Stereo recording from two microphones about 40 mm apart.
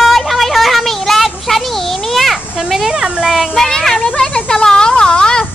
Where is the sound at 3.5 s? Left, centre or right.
Centre.